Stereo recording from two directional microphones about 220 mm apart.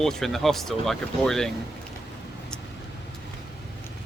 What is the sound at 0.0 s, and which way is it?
Speech, centre (ahead or behind).